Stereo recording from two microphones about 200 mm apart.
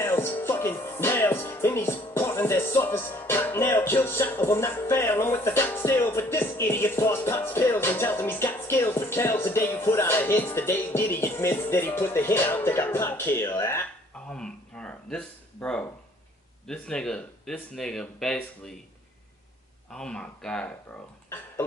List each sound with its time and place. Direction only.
0.0 s music: 10° left (ahead or behind)
14.3 s a sound: 5° left (ahead or behind)
16.6 s speech: 5° left (ahead or behind)
19.9 s speech: 5° left (ahead or behind)